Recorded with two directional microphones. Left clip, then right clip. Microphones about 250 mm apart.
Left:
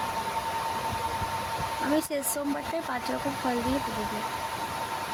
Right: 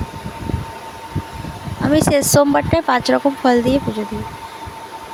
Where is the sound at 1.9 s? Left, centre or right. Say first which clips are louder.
Right 15 dB; right.